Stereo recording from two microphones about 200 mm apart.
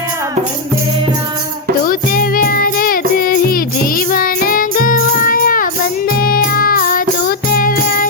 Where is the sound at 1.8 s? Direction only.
45° left (ahead or behind).